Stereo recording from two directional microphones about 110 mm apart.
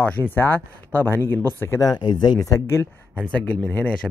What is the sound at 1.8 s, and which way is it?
Speech, 45° left (ahead or behind).